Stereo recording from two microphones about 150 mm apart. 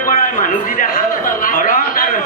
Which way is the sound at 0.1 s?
65° left (ahead or behind).